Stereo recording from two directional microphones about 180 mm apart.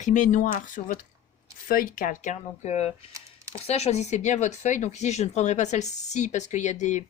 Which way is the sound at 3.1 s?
15° right (ahead or behind).